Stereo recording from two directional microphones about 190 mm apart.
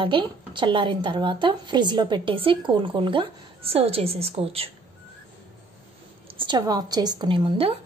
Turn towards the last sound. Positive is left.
turn(degrees=-30)  # may be behind; listen again after turning